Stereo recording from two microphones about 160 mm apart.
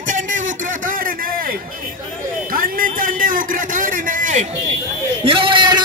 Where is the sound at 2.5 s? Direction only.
60° right (ahead or behind).